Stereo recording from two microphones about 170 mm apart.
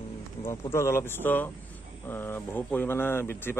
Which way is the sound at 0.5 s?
15° left (ahead or behind).